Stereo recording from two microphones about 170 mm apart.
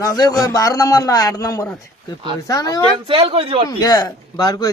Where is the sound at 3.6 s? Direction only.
20° left (ahead or behind).